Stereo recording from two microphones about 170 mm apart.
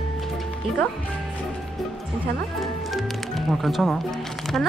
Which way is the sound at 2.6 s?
Centre (ahead or behind).